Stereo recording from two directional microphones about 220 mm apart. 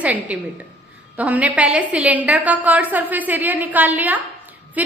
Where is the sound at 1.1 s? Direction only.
5° right (ahead or behind).